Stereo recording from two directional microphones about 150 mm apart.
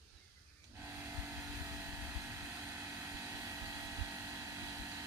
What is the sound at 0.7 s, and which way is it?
Vehicle, 15° right (ahead or behind).